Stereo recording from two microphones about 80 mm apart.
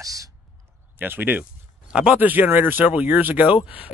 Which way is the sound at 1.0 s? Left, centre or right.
Right.